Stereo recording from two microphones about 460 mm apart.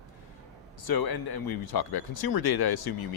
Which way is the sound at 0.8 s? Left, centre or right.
Left.